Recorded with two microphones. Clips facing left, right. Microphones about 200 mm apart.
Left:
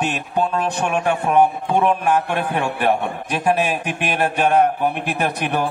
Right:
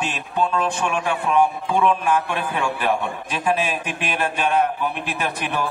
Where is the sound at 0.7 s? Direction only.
60° left (ahead or behind).